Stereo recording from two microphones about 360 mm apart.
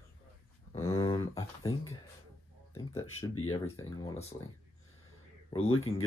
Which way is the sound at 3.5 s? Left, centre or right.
Centre.